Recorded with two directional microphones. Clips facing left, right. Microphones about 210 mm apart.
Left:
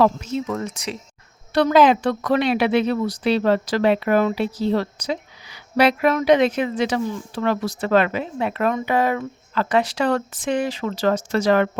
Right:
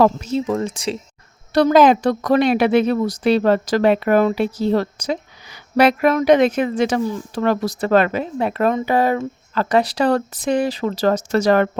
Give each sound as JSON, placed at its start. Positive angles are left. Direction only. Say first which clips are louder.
{"t": 0.0, "sound": "speech", "louder": "right 3 dB", "side_deg": -35}
{"t": 1.5, "sound": "a woman's voice", "louder": "right 3 dB", "side_deg": -40}